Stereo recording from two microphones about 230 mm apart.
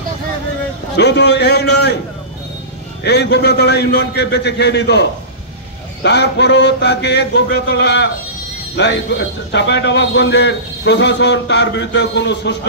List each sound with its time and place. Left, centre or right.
0.9 s a man's voice: left
3.0 s a man's voice: left
6.0 s a man's voice: left